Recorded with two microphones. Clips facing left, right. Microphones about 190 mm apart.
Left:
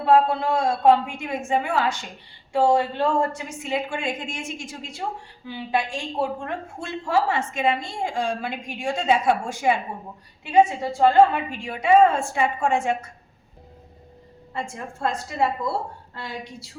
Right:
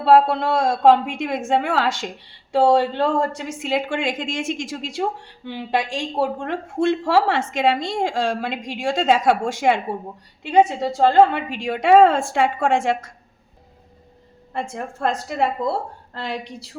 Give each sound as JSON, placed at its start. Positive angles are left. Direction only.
{"t": 0.0, "sound": "a woman's voice", "side_deg": -85}
{"t": 14.5, "sound": "a woman's voice", "side_deg": -65}